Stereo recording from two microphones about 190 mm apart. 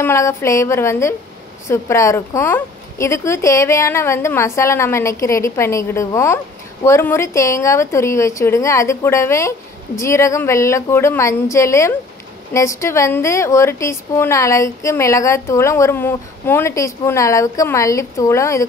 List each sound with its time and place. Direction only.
0.0 s speech: 15° left (ahead or behind)